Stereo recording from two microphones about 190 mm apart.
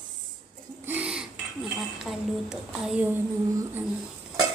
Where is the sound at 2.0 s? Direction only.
Centre (ahead or behind).